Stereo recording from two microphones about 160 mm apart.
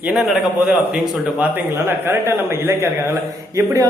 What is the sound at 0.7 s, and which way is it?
A man's voice, 5° right (ahead or behind).